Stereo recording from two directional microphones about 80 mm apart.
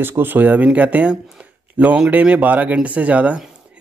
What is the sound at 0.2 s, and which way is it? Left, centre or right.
Speech, right.